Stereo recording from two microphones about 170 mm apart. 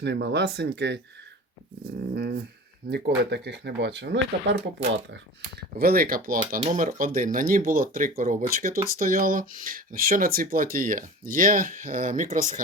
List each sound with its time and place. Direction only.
0.0 s speech: 90° right
2.1 s dog: 70° right (ahead or behind)
2.9 s speech: 85° right
5.1 s speech: 70° right (ahead or behind)
6.6 s speech: 45° right (ahead or behind)